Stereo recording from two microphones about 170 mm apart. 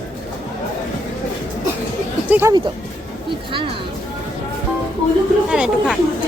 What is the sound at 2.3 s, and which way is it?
Speech, 10° right (ahead or behind).